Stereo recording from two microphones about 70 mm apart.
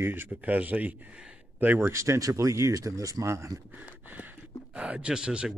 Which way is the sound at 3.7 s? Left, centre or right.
Right.